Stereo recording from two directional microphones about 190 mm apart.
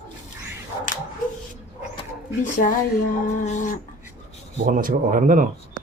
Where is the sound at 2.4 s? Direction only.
40° left (ahead or behind).